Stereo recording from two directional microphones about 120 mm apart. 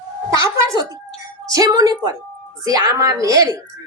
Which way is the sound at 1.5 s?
30° right (ahead or behind).